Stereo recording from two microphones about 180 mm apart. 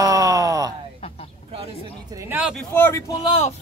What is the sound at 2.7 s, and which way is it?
Speech, 10° left (ahead or behind).